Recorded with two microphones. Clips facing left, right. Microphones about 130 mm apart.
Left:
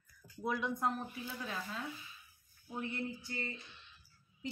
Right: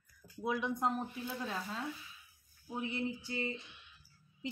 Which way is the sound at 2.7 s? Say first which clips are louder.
Right 3 dB; 15° right (ahead or behind).